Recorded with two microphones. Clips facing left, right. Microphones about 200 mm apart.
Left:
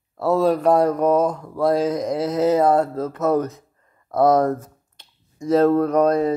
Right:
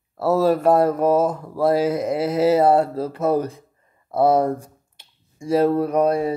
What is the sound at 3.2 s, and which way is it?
Speech, 30° right (ahead or behind).